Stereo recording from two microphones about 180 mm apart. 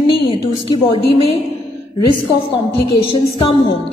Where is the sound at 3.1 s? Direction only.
30° left (ahead or behind).